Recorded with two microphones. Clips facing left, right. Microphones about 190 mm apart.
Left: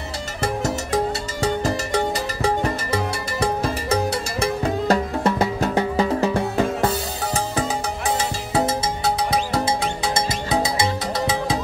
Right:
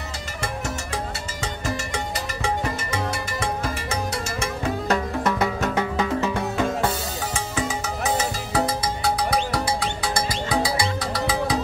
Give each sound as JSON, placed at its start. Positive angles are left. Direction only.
{"t": 1.4, "sound": "music", "side_deg": 35}